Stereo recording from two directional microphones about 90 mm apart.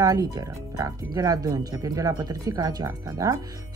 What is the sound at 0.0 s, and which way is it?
A woman's voice, 40° right (ahead or behind).